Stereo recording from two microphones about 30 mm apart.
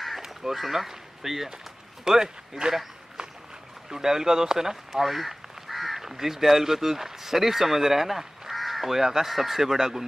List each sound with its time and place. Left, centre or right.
0.2 s speech: centre
3.9 s speech: centre
4.9 s crow: centre
6.0 s speech: centre